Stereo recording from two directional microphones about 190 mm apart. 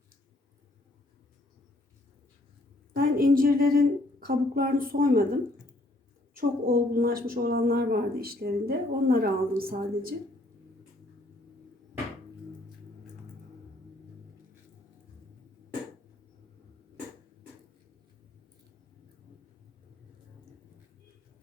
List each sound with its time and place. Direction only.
2.9 s a woman's voice: 50° right (ahead or behind)
6.3 s a woman's voice: 50° right (ahead or behind)